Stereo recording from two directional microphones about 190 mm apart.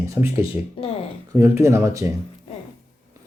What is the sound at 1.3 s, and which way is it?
Speech, 15° right (ahead or behind).